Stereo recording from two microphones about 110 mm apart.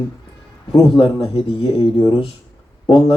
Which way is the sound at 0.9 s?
50° left (ahead or behind).